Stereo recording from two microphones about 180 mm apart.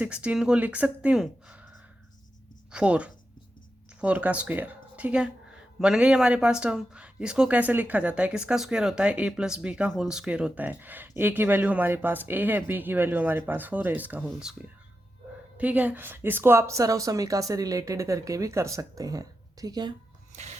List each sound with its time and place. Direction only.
0.0 s speech: 5° right (ahead or behind)
2.7 s speech: 5° right (ahead or behind)
15.5 s speech: 10° right (ahead or behind)
20.3 s music: 40° right (ahead or behind)